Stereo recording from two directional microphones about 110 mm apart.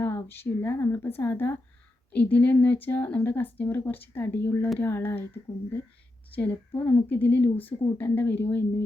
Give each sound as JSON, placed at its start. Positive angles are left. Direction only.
{"t": 0.0, "sound": "speech", "side_deg": 20}